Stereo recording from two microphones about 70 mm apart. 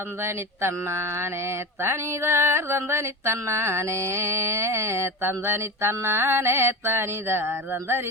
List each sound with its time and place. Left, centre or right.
0.2 s mantra: right